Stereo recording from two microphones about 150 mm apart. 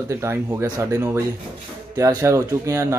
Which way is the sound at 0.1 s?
20° right (ahead or behind).